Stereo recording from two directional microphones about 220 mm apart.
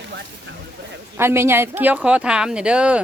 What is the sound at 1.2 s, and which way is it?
Speech, 10° right (ahead or behind).